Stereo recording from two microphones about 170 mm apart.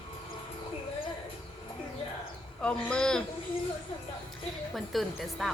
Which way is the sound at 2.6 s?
5° left (ahead or behind).